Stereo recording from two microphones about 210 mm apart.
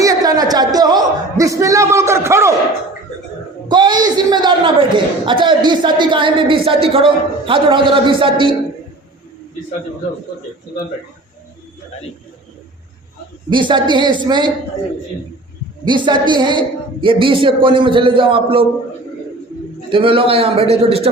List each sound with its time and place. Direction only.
0.0 s a sound: 15° right (ahead or behind)
3.7 s a woman's voice: 20° right (ahead or behind)
13.5 s speech: 20° right (ahead or behind)
15.8 s speech: 20° right (ahead or behind)
19.9 s speech: 25° right (ahead or behind)